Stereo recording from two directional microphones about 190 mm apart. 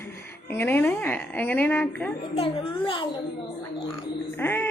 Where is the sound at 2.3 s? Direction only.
30° left (ahead or behind).